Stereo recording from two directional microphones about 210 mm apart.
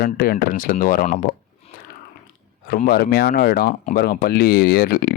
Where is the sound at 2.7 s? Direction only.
45° left (ahead or behind).